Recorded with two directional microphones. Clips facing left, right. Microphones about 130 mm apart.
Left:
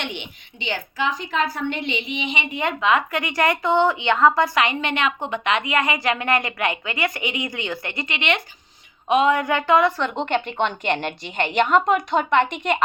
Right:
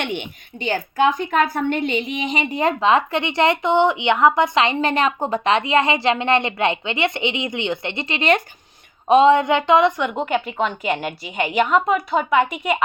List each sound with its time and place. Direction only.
0.0 s a woman's voice: 50° right (ahead or behind); by 10.1 s 20° right (ahead or behind)
10.1 s a woman's voice: 5° right (ahead or behind)